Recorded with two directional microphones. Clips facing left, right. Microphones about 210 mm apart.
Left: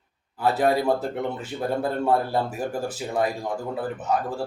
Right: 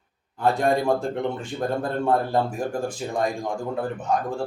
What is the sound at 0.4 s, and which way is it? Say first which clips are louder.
Speech: even; 5° left (ahead or behind).